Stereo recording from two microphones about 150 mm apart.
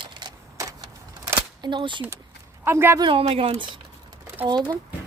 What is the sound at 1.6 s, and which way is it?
Speech, 30° right (ahead or behind).